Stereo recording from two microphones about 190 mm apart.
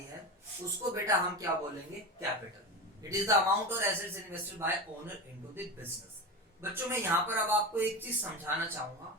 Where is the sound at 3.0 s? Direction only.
15° right (ahead or behind).